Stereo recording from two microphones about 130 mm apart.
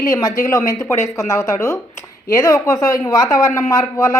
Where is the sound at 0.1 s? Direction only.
25° left (ahead or behind).